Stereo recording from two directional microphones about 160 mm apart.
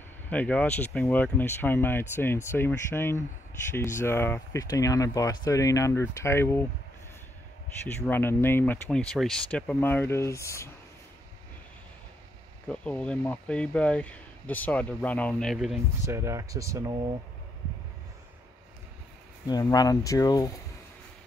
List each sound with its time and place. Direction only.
0.3 s speech: 10° left (ahead or behind)
8.1 s speech: 15° left (ahead or behind)
12.6 s speech: 10° left (ahead or behind)
16.1 s speech: 15° right (ahead or behind)
19.4 s speech: 25° left (ahead or behind)